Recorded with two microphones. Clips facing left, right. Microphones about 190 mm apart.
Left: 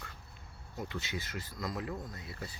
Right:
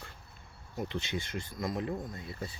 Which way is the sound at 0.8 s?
25° right (ahead or behind).